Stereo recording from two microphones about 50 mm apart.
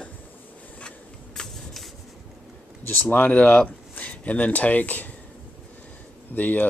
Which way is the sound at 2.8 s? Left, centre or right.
Left.